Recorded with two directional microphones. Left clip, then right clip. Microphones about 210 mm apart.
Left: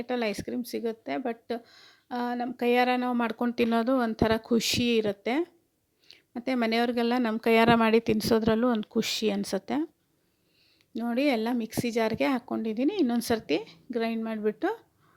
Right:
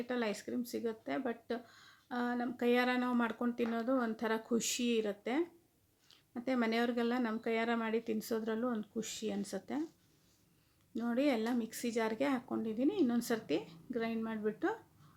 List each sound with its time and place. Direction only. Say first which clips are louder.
0.0 s speech: left 7 dB; 35° left (ahead or behind)
10.9 s speech: left 7 dB; 35° left (ahead or behind)